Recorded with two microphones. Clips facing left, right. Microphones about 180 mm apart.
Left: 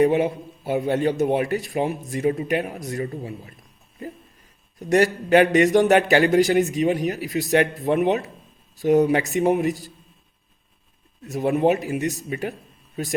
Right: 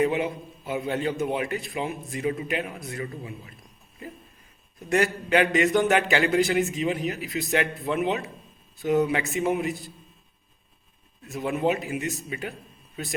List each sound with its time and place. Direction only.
0.0 s a man's voice: 40° left (ahead or behind)
4.9 s a man's voice: 40° left (ahead or behind)
11.2 s a man's voice: 40° left (ahead or behind)